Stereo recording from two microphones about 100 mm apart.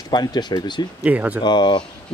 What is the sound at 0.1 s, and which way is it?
Speech, 45° left (ahead or behind).